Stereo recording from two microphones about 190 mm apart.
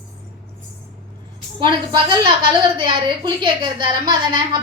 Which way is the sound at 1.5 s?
25° right (ahead or behind).